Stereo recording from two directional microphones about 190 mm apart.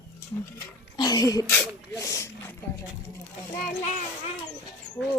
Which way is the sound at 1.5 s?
10° left (ahead or behind).